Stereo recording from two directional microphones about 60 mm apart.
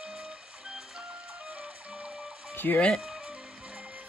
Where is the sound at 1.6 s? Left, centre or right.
Centre.